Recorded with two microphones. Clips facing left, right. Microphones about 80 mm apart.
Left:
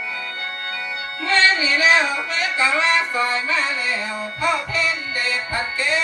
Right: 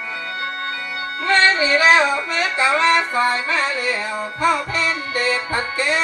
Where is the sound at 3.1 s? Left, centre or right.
Right.